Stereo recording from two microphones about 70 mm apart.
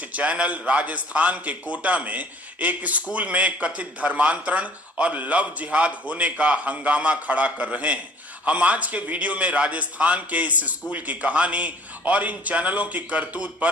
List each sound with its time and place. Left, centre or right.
0.0 s a man's voice: centre